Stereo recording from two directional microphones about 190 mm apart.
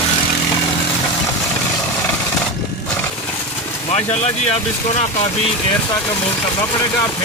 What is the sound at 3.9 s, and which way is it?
Speech, 35° left (ahead or behind).